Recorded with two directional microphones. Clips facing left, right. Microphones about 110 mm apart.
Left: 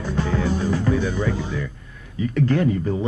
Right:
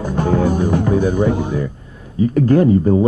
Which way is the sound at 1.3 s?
50° right (ahead or behind).